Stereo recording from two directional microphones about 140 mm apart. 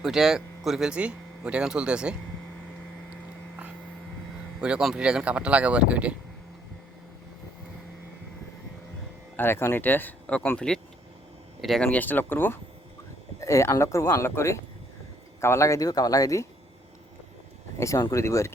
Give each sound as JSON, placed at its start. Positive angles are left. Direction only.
{"t": 0.0, "sound": "speech", "side_deg": -5}
{"t": 4.6, "sound": "speech", "side_deg": -5}
{"t": 9.3, "sound": "speech", "side_deg": 15}
{"t": 11.9, "sound": "speech", "side_deg": 10}
{"t": 17.7, "sound": "speech", "side_deg": 20}